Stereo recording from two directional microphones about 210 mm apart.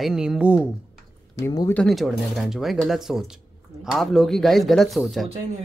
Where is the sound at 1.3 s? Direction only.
15° left (ahead or behind).